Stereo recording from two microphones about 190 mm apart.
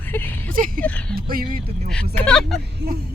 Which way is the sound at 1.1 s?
50° right (ahead or behind).